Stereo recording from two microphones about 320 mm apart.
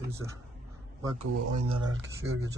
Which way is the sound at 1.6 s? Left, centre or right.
Centre.